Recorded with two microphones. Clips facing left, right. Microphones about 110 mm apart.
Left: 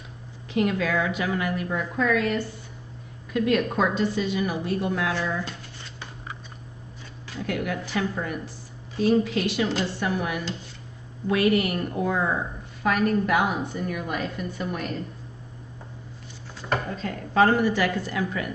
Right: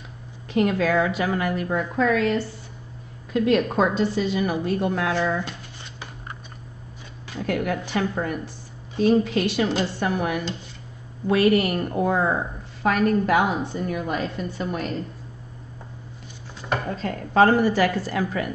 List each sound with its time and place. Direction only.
0.6 s a woman's voice: 40° right (ahead or behind)
3.3 s a woman's voice: 25° right (ahead or behind)
4.5 s a woman's voice: 50° right (ahead or behind)
5.4 s a sound: 15° right (ahead or behind)
7.4 s a woman's voice: 45° right (ahead or behind); by 14.9 s 30° right (ahead or behind)
17.0 s a woman's voice: 45° right (ahead or behind)